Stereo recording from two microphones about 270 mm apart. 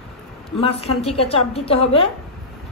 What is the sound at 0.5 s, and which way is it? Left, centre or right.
A woman's voice, left.